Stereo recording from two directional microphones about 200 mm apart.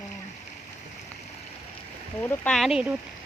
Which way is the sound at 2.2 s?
10° left (ahead or behind).